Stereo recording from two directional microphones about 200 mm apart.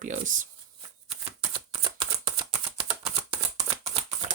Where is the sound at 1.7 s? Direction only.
25° right (ahead or behind).